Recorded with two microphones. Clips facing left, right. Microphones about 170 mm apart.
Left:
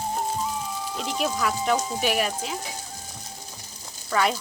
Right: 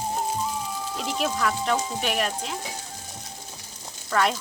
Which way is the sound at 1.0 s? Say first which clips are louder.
Even; centre (ahead or behind).